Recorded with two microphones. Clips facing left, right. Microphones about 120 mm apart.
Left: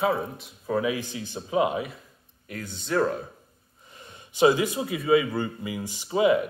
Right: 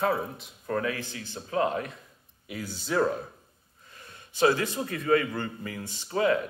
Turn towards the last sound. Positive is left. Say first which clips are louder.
# left 4 dB
turn(degrees=15)  # may be behind; listen again after turning